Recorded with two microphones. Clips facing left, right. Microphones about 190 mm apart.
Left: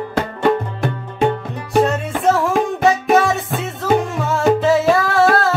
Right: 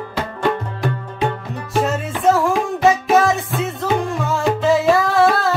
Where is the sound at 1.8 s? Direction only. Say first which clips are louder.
Left 4 dB; centre (ahead or behind).